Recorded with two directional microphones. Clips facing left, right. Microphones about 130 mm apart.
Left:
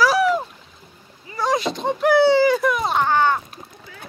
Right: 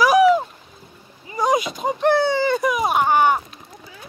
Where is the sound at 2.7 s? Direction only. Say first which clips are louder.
Right 2 dB; 15° right (ahead or behind).